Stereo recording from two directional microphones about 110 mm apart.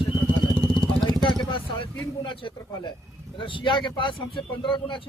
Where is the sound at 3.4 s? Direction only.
50° left (ahead or behind).